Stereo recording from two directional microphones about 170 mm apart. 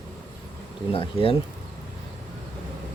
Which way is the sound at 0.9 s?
35° left (ahead or behind).